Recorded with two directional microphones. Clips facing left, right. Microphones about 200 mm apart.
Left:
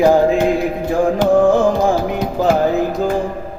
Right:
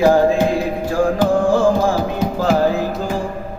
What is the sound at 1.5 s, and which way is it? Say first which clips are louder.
Music: left 1 dB; 20° left (ahead or behind).